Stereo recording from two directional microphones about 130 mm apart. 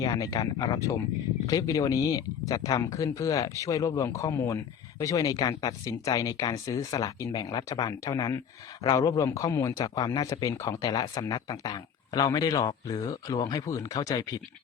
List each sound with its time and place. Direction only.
0.0 s speech: 30° left (ahead or behind)